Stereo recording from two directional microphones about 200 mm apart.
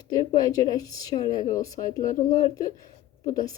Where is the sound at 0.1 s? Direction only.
20° left (ahead or behind).